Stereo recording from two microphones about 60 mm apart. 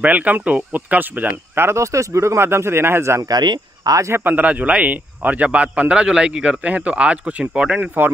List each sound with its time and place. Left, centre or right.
0.0 s speech: right
1.8 s speech: right
3.8 s speech: right
4.1 s speech: right; by 7.9 s centre